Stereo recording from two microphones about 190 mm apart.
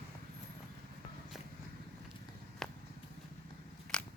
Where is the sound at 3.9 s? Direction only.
5° left (ahead or behind).